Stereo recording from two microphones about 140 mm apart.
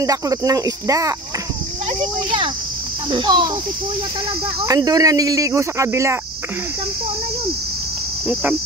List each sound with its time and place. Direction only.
0.0 s speech: 25° right (ahead or behind)
3.1 s speech: 35° right (ahead or behind)
4.6 s speech: 25° right (ahead or behind)